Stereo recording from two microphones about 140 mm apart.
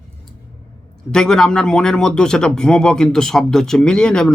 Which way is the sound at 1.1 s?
5° left (ahead or behind).